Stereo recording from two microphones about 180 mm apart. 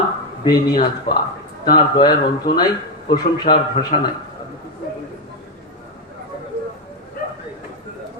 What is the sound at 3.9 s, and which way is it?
Speech, 40° left (ahead or behind).